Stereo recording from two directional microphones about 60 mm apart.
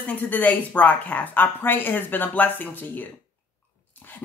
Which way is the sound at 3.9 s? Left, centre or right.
Left.